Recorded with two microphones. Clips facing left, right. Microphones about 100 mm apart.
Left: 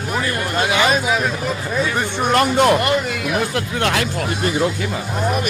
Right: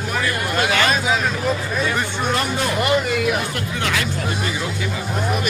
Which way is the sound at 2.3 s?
65° left (ahead or behind).